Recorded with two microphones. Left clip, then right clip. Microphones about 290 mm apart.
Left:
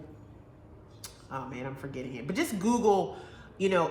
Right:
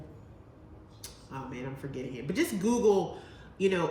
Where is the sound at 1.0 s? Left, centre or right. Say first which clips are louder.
Left 4 dB; centre.